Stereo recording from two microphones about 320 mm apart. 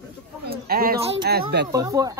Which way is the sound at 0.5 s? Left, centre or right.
Right.